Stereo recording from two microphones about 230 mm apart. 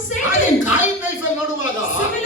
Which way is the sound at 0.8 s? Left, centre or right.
Left.